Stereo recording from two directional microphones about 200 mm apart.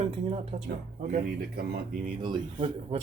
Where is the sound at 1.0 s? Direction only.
45° right (ahead or behind).